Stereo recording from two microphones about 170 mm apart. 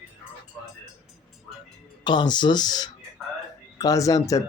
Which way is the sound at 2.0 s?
25° left (ahead or behind).